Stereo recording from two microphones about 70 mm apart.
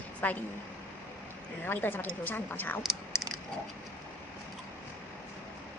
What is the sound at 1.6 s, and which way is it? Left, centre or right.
Speech, left.